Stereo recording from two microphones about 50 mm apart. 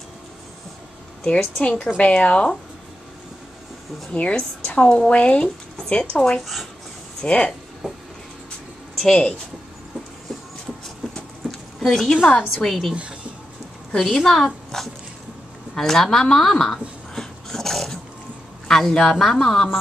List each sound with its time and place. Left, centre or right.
1.2 s a woman's voice: left
4.1 s a woman's voice: left
6.4 s speech: centre
7.2 s a woman's voice: left
9.0 s a woman's voice: centre
11.9 s a woman's voice: centre
12.3 s a woman's voice: left
12.6 s speech: centre
12.9 s speech: right
13.9 s a woman's voice: centre
17.1 s dog: centre
18.7 s a woman's voice: centre